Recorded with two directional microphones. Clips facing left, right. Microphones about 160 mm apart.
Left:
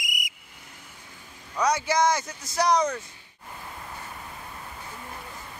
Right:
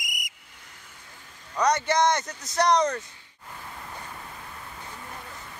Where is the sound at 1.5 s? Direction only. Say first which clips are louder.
Right 1 dB; 5° left (ahead or behind).